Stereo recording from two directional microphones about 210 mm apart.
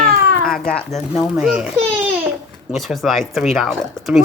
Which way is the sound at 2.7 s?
Centre (ahead or behind).